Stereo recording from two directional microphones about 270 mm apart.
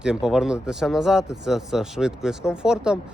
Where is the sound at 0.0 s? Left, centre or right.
Centre.